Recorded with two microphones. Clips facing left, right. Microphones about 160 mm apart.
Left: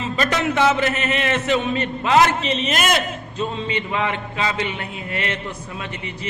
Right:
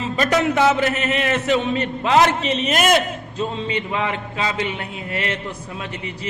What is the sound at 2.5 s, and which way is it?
A man's voice, 45° right (ahead or behind).